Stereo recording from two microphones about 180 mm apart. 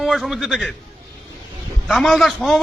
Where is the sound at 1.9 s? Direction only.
Centre (ahead or behind).